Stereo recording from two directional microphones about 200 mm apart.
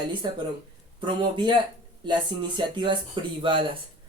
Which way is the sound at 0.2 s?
25° right (ahead or behind).